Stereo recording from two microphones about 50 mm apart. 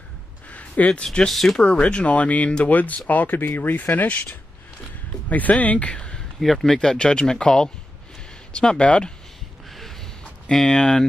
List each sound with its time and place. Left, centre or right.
0.5 s a sound: left
1.0 s speech: centre
1.3 s speech: centre
1.6 s speech: left
6.4 s speech: centre
10.7 s speech: centre